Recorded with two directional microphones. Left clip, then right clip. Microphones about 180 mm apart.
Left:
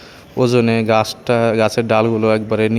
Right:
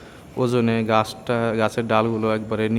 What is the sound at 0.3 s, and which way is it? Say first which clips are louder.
A man's voice: left 6 dB; 20° left (ahead or behind).